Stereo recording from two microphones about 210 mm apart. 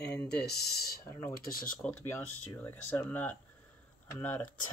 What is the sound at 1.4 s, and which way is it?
Speech, 45° left (ahead or behind).